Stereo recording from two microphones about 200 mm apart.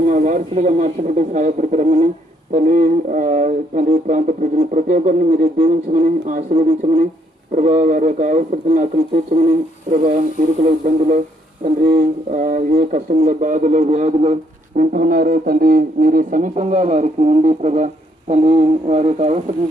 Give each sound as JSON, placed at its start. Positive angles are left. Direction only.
{"t": 0.1, "sound": "speech", "side_deg": -40}
{"t": 10.6, "sound": "speech", "side_deg": -40}